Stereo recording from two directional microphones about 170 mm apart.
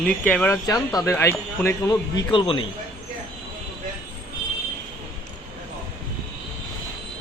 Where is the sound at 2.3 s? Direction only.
30° left (ahead or behind).